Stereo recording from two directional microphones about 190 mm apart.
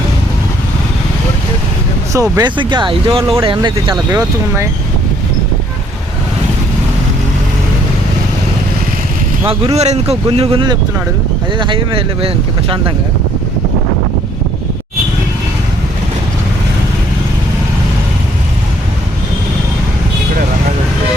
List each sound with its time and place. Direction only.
2.1 s speech: 15° right (ahead or behind)
4.1 s speech: 15° right (ahead or behind)
9.5 s speech: 30° right (ahead or behind)